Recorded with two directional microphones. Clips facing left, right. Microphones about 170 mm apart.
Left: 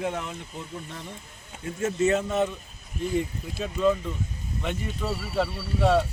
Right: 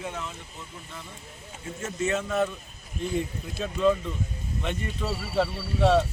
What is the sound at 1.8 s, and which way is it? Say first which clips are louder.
Speech: left 5 dB; 40° left (ahead or behind).